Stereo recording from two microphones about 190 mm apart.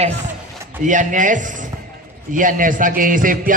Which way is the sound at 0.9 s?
40° right (ahead or behind).